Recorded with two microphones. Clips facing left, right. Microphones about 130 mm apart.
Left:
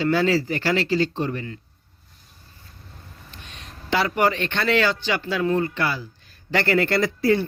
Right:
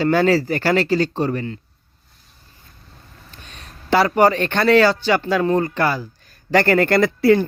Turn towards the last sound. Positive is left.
turn(degrees=-65)  # may be behind; listen again after turning